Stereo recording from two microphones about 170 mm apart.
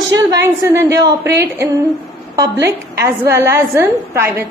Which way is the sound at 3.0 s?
15° right (ahead or behind).